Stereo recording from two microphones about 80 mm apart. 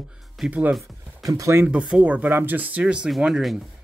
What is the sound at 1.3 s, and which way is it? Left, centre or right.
Speech, right.